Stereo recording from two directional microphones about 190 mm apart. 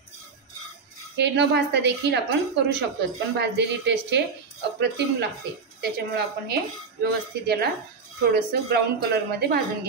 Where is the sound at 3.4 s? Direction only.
65° right (ahead or behind).